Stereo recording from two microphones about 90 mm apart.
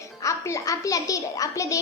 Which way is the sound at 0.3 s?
35° left (ahead or behind).